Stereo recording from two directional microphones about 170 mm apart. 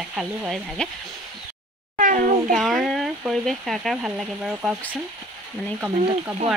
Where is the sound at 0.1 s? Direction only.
5° right (ahead or behind).